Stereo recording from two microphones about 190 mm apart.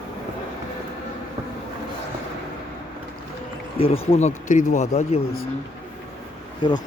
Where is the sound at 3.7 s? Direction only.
30° left (ahead or behind).